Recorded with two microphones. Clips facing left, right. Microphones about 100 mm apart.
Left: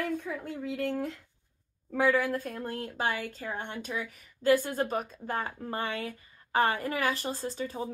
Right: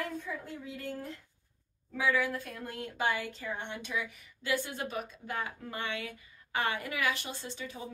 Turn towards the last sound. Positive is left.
turn(degrees=40)  # may be behind; listen again after turning